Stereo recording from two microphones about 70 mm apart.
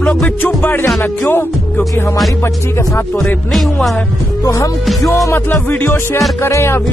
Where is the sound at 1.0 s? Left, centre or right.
Left.